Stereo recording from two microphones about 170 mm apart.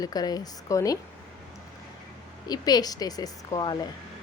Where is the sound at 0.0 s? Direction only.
20° left (ahead or behind).